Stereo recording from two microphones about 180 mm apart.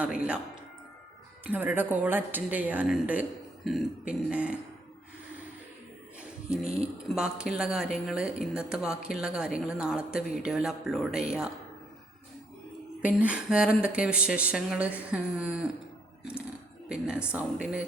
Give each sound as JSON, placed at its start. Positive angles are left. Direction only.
{"t": 0.0, "sound": "a woman's voice", "side_deg": -5}
{"t": 1.5, "sound": "a woman's voice", "side_deg": -10}
{"t": 6.1, "sound": "music", "side_deg": -5}
{"t": 7.2, "sound": "speech", "side_deg": -5}
{"t": 13.0, "sound": "a woman's voice", "side_deg": -10}
{"t": 16.9, "sound": "speech", "side_deg": -5}